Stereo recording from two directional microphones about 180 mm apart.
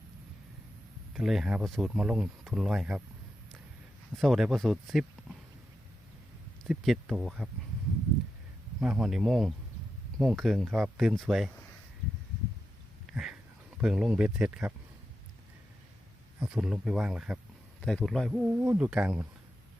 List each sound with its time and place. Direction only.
1.1 s speech: centre (ahead or behind)
4.2 s speech: centre (ahead or behind)
6.7 s speech: centre (ahead or behind)
8.8 s speech: 5° right (ahead or behind)
13.1 s a sound: centre (ahead or behind)
13.8 s speech: centre (ahead or behind)
16.4 s speech: 5° right (ahead or behind)